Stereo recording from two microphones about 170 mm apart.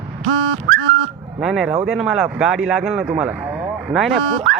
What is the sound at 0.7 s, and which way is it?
Car alarm, 80° right.